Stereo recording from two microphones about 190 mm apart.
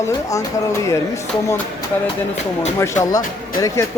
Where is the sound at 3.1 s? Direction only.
20° left (ahead or behind).